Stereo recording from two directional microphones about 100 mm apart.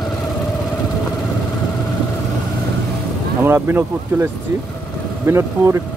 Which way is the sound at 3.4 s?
25° right (ahead or behind).